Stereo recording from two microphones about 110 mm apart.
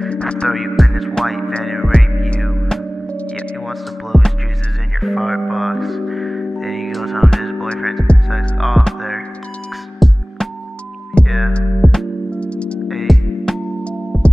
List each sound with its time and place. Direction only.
0.0 s music: 10° left (ahead or behind)
3.6 s speech: centre (ahead or behind)
5.0 s music: centre (ahead or behind)